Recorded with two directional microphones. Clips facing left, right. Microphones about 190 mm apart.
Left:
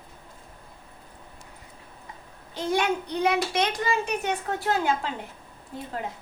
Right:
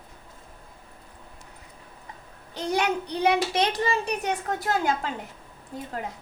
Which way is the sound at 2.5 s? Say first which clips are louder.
Even; 35° right (ahead or behind).